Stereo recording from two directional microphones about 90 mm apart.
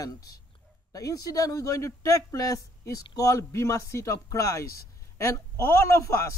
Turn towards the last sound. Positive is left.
turn(degrees=30)  # may be behind; listen again after turning